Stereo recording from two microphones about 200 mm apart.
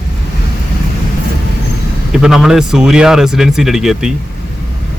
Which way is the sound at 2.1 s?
Centre (ahead or behind).